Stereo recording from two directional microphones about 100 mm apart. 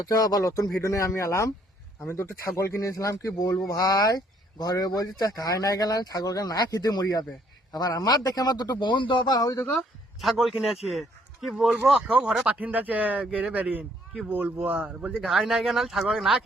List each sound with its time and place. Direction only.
0.0 s speech: 35° left (ahead or behind)
10.2 s a man's voice: centre (ahead or behind)